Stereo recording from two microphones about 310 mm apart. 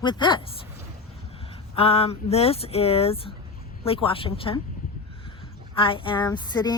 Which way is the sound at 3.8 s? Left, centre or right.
Centre.